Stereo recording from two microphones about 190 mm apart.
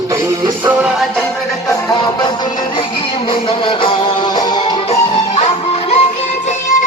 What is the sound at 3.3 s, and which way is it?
Music, 25° left (ahead or behind).